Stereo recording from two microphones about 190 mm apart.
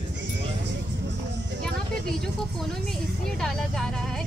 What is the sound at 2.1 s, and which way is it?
Speech, centre (ahead or behind).